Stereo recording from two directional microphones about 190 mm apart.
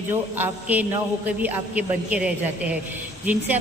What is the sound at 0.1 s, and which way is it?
A woman's voice, 10° right (ahead or behind).